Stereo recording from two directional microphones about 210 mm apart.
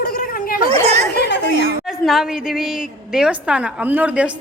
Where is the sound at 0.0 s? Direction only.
40° left (ahead or behind).